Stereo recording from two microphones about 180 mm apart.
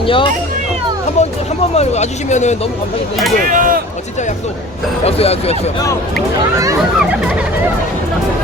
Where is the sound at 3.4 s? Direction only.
50° right (ahead or behind).